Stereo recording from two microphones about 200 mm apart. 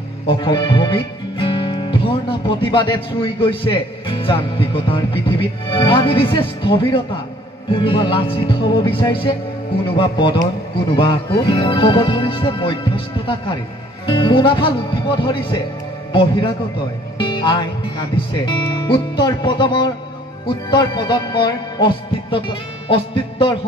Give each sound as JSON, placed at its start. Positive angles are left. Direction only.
{"t": 0.3, "sound": "speech", "side_deg": 20}
{"t": 17.2, "sound": "music", "side_deg": 20}
{"t": 18.3, "sound": "speech", "side_deg": 25}